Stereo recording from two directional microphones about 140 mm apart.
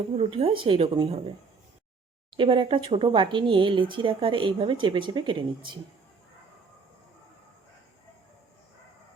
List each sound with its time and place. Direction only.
0.2 s speech: 40° right (ahead or behind)
2.3 s speech: 35° right (ahead or behind)